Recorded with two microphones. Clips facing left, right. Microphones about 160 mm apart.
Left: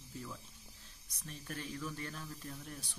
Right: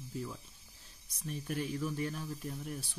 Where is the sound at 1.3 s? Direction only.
10° right (ahead or behind).